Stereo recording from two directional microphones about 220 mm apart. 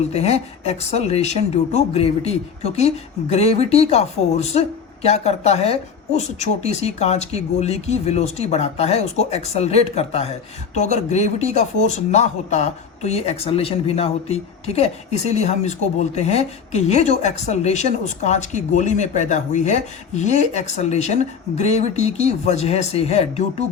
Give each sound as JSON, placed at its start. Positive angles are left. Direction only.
{"t": 0.1, "sound": "speech", "side_deg": 30}